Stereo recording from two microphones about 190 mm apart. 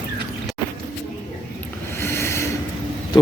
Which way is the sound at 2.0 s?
15° left (ahead or behind).